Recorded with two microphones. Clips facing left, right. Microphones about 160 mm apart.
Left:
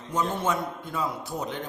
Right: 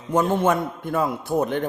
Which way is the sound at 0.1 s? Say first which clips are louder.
Right 7 dB; 55° right (ahead or behind).